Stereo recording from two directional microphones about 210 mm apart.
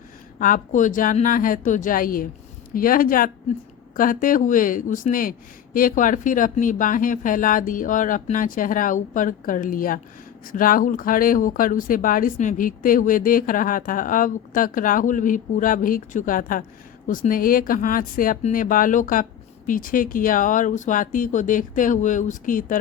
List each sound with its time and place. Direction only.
0.3 s speech: 40° left (ahead or behind)